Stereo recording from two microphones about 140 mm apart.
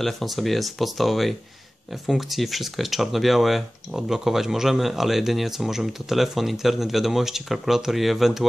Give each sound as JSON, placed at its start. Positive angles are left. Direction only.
{"t": 0.0, "sound": "speech", "side_deg": 0}